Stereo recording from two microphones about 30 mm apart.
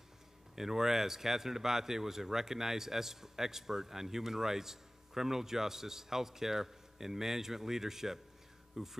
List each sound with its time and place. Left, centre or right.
0.6 s speech: centre